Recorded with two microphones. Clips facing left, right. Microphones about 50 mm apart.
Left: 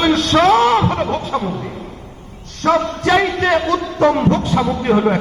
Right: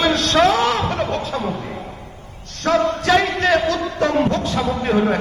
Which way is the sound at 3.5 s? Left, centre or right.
Centre.